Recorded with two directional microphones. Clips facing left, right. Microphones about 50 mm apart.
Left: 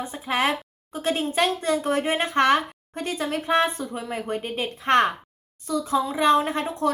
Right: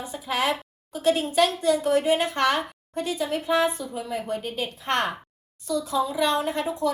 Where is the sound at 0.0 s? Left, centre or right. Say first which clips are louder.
Left 2 dB; left.